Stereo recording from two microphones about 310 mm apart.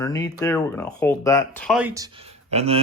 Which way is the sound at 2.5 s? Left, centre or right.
Centre.